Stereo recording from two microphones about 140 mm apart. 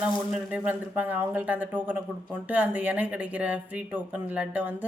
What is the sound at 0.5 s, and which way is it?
Speech, 10° right (ahead or behind).